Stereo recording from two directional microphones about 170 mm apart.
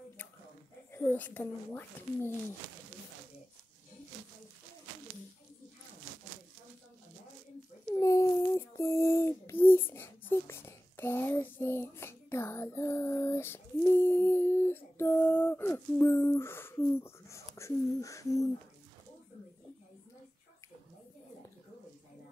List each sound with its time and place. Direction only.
0.9 s speech: 10° left (ahead or behind)
8.0 s child singing: 20° left (ahead or behind)
17.6 s a sound: 15° left (ahead or behind)